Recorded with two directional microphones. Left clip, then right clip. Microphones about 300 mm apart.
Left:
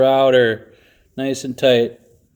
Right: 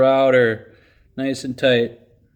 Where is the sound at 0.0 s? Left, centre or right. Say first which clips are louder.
Left 1 dB; centre.